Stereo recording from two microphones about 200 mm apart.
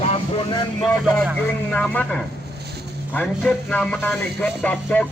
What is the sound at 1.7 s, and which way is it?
Speech, 5° left (ahead or behind).